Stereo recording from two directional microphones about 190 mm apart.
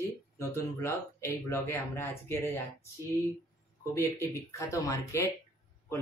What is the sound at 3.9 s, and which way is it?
Speech, 15° left (ahead or behind).